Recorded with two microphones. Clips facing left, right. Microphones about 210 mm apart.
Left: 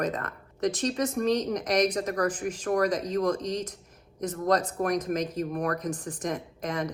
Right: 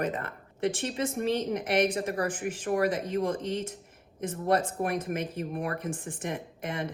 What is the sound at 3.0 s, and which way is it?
Speech, 25° right (ahead or behind).